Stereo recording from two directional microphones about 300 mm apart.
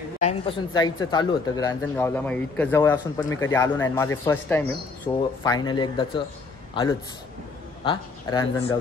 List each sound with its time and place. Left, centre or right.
0.2 s a man's voice: centre